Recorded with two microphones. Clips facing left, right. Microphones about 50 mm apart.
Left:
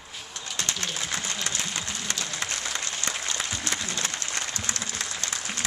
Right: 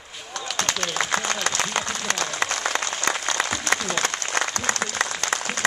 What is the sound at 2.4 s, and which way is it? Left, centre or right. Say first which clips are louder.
Applause: right 7 dB; right.